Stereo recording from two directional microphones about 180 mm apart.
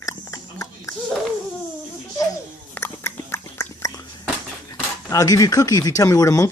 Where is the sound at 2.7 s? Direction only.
15° left (ahead or behind).